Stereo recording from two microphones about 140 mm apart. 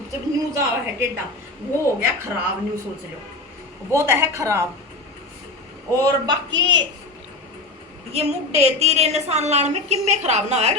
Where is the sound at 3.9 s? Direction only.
20° right (ahead or behind).